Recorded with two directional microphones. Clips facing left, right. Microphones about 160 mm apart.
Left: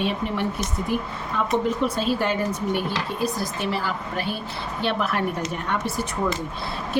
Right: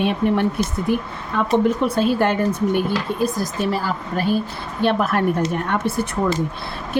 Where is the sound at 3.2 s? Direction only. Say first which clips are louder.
Right 3 dB; 40° right (ahead or behind).